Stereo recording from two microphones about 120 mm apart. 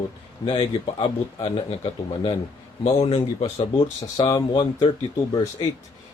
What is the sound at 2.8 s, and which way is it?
Speech, 60° left (ahead or behind).